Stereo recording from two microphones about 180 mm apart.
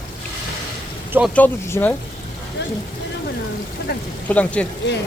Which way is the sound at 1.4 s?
10° left (ahead or behind).